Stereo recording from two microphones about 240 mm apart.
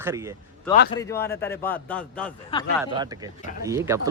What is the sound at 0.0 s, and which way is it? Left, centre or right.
Speech, centre.